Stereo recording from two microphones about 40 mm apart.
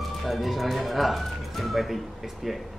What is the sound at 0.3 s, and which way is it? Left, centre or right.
Speech, centre.